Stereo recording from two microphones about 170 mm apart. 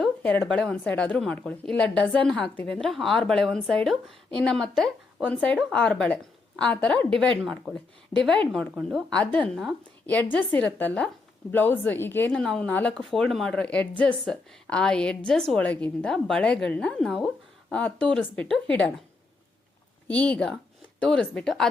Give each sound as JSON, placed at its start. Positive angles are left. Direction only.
{"t": 0.0, "sound": "a woman's voice", "side_deg": 5}
{"t": 8.1, "sound": "speech", "side_deg": 25}
{"t": 8.5, "sound": "a woman's voice", "side_deg": 0}
{"t": 20.1, "sound": "a woman's voice", "side_deg": 5}